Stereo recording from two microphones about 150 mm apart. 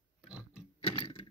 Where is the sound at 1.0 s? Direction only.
35° left (ahead or behind).